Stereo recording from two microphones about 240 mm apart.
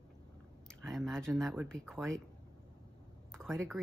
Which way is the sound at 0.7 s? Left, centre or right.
Centre.